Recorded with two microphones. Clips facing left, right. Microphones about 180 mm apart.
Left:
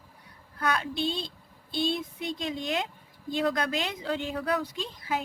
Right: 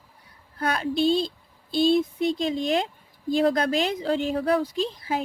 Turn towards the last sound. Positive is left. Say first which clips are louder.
# right 6 dB
turn(degrees=-30)  # may be behind; listen again after turning